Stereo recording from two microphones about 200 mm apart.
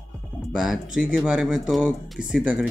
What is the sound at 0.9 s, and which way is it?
Speech, 5° right (ahead or behind).